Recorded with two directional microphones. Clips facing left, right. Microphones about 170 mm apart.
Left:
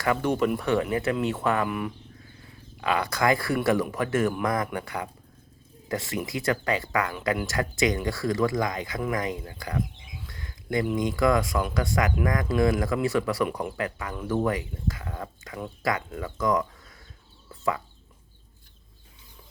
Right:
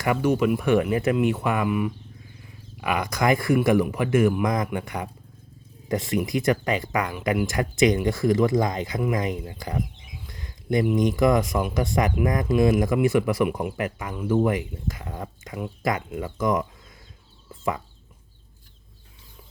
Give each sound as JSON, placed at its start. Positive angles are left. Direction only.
{"t": 0.0, "sound": "speech", "side_deg": -10}
{"t": 1.1, "sound": "speech", "side_deg": -10}
{"t": 2.8, "sound": "speech", "side_deg": -15}
{"t": 10.2, "sound": "a sound", "side_deg": -20}
{"t": 10.9, "sound": "speech", "side_deg": -20}
{"t": 17.5, "sound": "chicken", "side_deg": -20}